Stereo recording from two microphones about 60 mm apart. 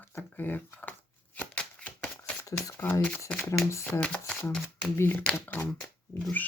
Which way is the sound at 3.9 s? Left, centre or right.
Centre.